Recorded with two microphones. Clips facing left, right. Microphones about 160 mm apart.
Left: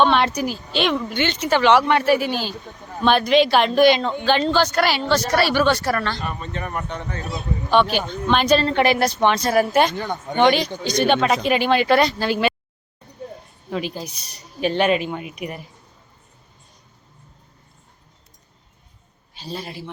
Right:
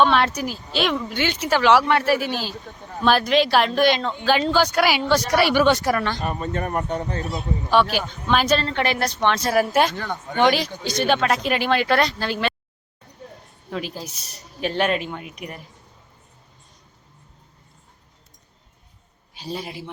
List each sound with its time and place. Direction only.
0.0 s speech: centre (ahead or behind)
6.2 s speech: 40° right (ahead or behind)
7.7 s speech: 5° right (ahead or behind)
8.6 s a woman's voice: 10° left (ahead or behind)
10.0 s a woman's voice: 20° left (ahead or behind)
10.3 s speech: 5° right (ahead or behind)
13.7 s speech: centre (ahead or behind)
19.4 s speech: 15° right (ahead or behind)